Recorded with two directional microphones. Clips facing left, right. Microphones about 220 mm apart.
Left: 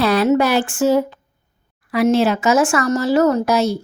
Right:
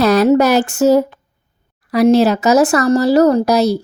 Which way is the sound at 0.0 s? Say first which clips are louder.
Right 4 dB; 40° right (ahead or behind).